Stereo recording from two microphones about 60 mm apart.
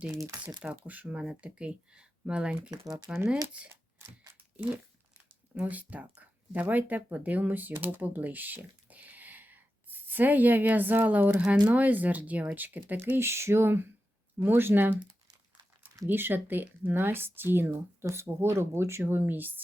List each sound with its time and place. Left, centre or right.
0.4 s speech: right
2.6 s speech: right
5.1 s a sound: right
6.5 s speech: right
11.3 s speech: centre
11.7 s speech: right
13.1 s speech: right
16.0 s speech: right
18.1 s speech: right